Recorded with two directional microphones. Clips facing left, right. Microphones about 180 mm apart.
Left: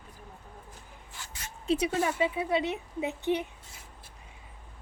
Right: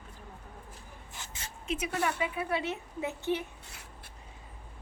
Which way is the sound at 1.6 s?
35° left (ahead or behind).